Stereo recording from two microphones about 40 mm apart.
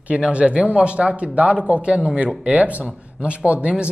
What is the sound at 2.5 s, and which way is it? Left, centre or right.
Speech, right.